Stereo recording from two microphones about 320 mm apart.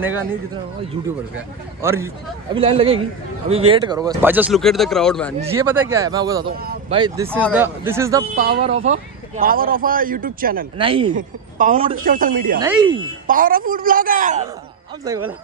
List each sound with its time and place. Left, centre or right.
0.0 s speech: centre
1.8 s speech: centre
6.5 s speech: right
6.9 s speech: centre
10.8 s speech: centre
12.5 s speech: centre
13.3 s speech: right